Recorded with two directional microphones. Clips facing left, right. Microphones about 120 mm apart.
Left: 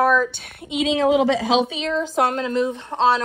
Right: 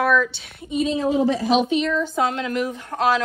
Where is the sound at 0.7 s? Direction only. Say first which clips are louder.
Left 3 dB; 90° left.